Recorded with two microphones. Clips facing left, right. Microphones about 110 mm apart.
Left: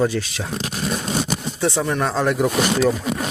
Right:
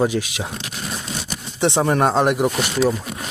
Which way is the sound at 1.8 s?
35° right (ahead or behind).